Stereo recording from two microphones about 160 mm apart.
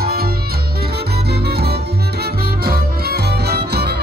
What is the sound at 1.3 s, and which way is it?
Music, 90° right.